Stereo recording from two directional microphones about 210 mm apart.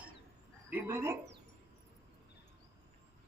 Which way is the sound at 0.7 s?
10° right (ahead or behind).